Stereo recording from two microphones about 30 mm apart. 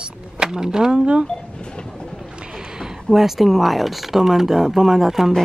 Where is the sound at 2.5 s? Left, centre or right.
Centre.